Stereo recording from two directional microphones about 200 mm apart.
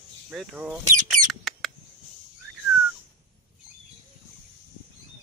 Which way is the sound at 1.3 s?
Centre (ahead or behind).